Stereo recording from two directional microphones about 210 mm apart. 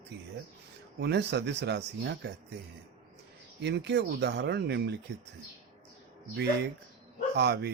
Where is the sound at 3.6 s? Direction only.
55° right (ahead or behind).